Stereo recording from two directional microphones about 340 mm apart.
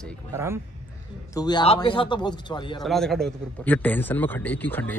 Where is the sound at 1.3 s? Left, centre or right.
Centre.